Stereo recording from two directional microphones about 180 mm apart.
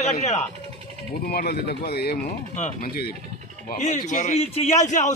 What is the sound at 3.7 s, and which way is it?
A man's voice, 45° left (ahead or behind).